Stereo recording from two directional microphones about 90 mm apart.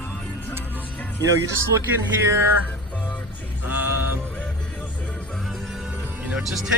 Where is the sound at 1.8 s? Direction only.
35° right (ahead or behind).